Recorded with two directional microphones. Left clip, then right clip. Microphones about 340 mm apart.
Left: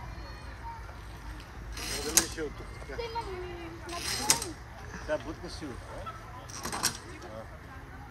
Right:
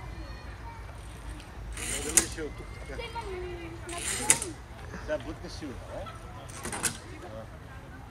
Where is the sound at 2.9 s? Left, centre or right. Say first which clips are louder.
Left 1 dB; left.